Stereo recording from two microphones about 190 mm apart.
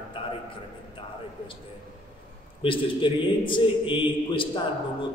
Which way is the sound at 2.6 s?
25° left (ahead or behind).